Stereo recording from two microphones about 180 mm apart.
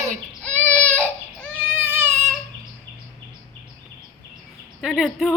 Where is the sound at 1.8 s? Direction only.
10° right (ahead or behind).